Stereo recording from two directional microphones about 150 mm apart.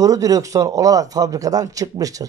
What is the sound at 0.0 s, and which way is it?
Speech, 25° right (ahead or behind).